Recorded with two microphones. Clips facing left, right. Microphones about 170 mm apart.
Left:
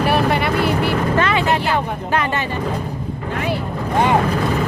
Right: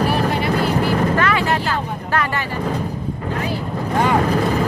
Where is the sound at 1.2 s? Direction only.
20° left (ahead or behind).